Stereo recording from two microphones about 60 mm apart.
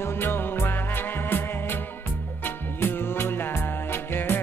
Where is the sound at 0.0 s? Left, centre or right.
Left.